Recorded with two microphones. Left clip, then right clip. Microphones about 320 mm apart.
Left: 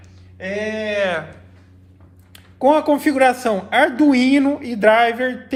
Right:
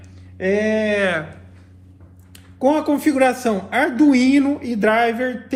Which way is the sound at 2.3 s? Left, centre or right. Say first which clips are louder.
Left 3 dB; left.